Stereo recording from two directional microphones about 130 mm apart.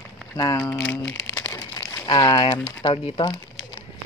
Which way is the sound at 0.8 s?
20° left (ahead or behind).